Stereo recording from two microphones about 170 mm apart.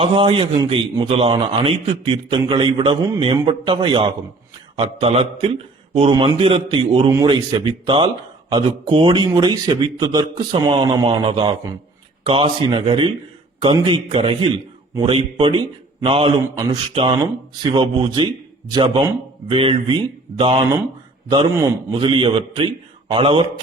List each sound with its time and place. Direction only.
0.0 s a man's voice: 30° right (ahead or behind)